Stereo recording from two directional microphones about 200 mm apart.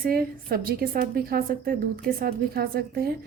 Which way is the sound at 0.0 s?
45° right (ahead or behind).